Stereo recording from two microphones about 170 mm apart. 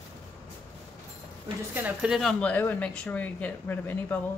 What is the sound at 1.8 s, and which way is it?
Speech, 5° right (ahead or behind).